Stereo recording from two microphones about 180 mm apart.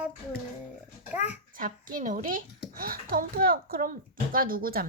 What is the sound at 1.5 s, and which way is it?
Speech, 50° right (ahead or behind).